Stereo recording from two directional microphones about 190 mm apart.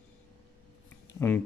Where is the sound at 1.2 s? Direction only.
10° left (ahead or behind).